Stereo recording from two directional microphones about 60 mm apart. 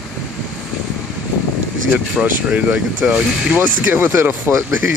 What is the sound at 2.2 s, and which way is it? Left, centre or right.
Speech, right.